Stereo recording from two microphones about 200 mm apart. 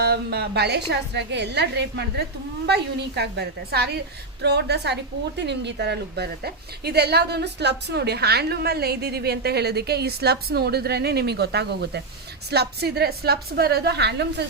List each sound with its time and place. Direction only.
0.0 s a woman's voice: 55° right (ahead or behind)